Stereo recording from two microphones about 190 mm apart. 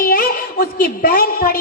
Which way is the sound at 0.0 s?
50° left (ahead or behind).